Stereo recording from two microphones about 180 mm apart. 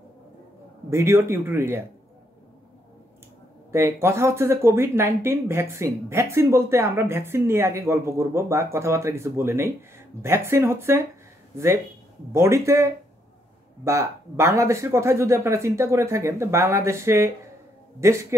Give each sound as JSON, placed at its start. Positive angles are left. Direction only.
{"t": 0.8, "sound": "a man's voice", "side_deg": -15}
{"t": 3.7, "sound": "speech", "side_deg": -15}